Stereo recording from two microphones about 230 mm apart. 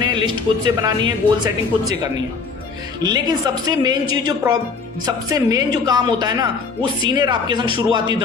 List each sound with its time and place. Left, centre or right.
0.0 s speech: centre
3.0 s a woman's voice: centre